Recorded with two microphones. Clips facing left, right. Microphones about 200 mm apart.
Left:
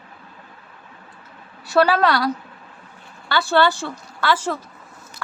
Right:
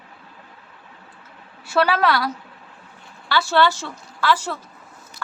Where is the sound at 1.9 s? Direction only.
Centre (ahead or behind).